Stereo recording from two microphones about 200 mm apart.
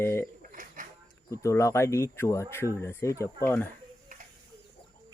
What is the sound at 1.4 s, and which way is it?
Speech, 15° left (ahead or behind).